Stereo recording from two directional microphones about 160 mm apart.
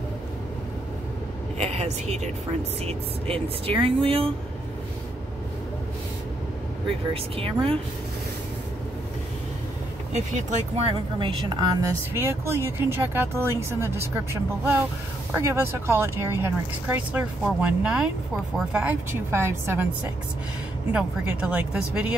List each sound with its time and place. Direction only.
1.6 s a woman's voice: 45° right (ahead or behind)
7.3 s speech: 35° right (ahead or behind)
10.1 s a woman's voice: 45° right (ahead or behind)
10.9 s a woman's voice: 30° right (ahead or behind)
12.1 s speech: 15° right (ahead or behind)
20.9 s speech: 5° right (ahead or behind)